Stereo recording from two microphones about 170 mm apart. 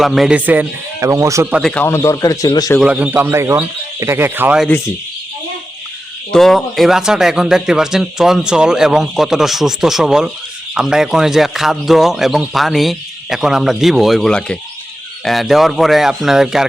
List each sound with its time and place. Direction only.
0.0 s speech: centre (ahead or behind)
1.7 s a man's voice: 15° left (ahead or behind)
2.8 s speech: 5° right (ahead or behind)
6.3 s speech: centre (ahead or behind)